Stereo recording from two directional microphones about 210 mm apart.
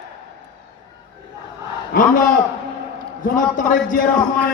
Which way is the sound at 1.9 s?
40° left (ahead or behind).